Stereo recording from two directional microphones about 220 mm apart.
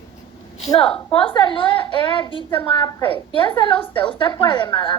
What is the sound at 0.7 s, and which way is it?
A woman's voice, 25° left (ahead or behind).